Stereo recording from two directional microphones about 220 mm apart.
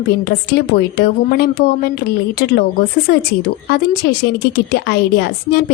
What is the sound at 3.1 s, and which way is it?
Speech, 45° left (ahead or behind).